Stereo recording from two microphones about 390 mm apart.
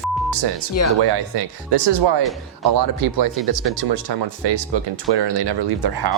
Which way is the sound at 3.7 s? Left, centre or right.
Right.